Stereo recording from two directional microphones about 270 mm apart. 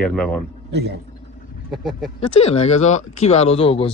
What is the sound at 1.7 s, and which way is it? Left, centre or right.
Speech, centre.